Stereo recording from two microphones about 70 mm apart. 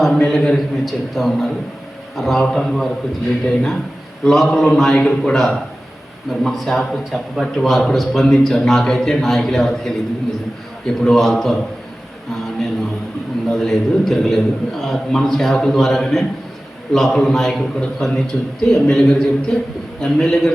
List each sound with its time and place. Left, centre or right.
0.1 s a man's voice: centre
11.0 s a man's voice: centre
12.3 s a sound: centre
13.5 s a man's voice: centre